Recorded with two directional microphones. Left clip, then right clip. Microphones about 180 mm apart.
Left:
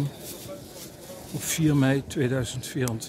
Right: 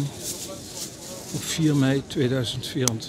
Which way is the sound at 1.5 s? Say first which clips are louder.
Right 1 dB; 10° left (ahead or behind).